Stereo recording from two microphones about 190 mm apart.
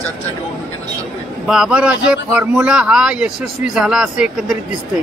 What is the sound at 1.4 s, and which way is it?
A man's voice, 5° right (ahead or behind).